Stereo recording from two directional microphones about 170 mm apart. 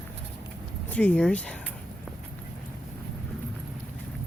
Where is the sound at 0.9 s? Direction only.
10° left (ahead or behind).